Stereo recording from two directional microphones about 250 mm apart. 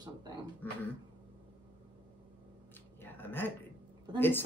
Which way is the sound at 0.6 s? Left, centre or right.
Centre.